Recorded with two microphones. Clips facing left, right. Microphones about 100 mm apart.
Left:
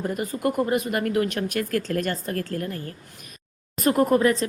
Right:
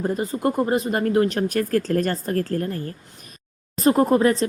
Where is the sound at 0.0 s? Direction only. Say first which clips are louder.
Right 3 dB; 30° right (ahead or behind).